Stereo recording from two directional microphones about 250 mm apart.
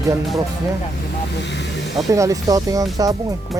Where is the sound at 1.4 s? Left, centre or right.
Left.